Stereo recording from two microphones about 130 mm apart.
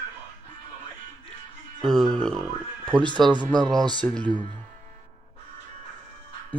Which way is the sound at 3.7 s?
35° right (ahead or behind).